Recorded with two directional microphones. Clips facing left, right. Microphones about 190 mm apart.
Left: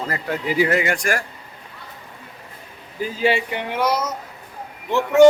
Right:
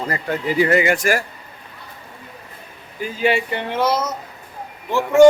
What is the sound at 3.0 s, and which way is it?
Speech, 30° left (ahead or behind).